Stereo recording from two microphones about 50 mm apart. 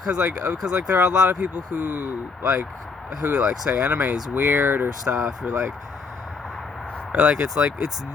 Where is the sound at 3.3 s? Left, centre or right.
Right.